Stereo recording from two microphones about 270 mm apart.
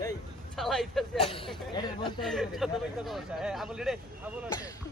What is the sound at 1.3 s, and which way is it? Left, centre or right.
Speech, centre.